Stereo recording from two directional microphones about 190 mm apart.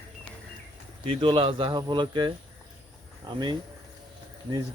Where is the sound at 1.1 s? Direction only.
25° right (ahead or behind).